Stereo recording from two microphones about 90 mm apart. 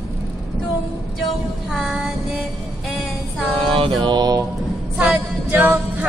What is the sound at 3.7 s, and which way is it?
Mantra, 80° right.